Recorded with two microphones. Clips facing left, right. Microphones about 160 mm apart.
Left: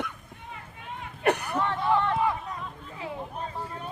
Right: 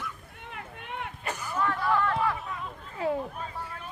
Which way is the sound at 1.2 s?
65° left (ahead or behind).